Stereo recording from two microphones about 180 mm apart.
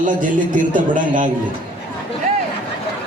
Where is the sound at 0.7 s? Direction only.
45° right (ahead or behind).